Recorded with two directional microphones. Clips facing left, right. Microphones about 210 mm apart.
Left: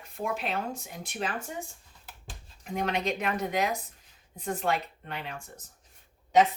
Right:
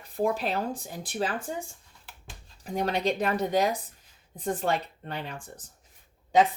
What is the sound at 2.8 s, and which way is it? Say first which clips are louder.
Speech: right 3 dB; 35° right (ahead or behind).